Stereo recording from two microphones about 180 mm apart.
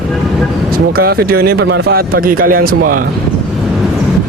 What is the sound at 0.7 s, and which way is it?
A man's voice, 55° right (ahead or behind).